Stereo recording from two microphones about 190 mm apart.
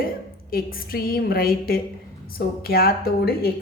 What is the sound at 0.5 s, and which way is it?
A woman's voice, 50° left (ahead or behind).